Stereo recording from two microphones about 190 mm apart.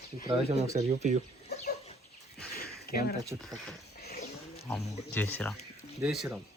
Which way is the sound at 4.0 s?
55° left (ahead or behind).